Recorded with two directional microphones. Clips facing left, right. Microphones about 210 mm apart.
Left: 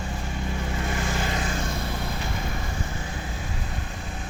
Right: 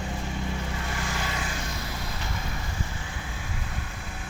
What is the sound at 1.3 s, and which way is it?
Vehicle, 45° left (ahead or behind).